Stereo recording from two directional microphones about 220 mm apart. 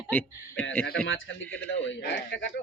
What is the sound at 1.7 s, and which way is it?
Speech, 50° left (ahead or behind).